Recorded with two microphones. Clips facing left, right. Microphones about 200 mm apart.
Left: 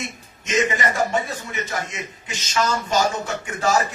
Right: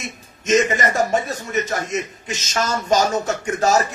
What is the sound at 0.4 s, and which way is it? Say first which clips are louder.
A man's voice: right 4 dB; 45° right (ahead or behind).